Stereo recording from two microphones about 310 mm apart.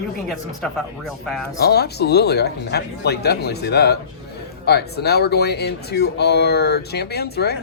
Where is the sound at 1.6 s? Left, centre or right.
Left.